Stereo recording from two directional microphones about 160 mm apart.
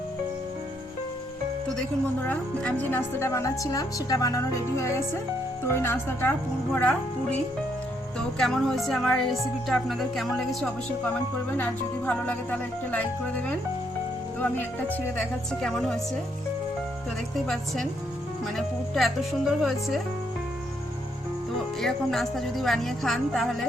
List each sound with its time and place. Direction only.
2.2 s speech: 10° left (ahead or behind)
8.4 s speech: centre (ahead or behind)
17.3 s speech: centre (ahead or behind)
21.8 s speech: centre (ahead or behind)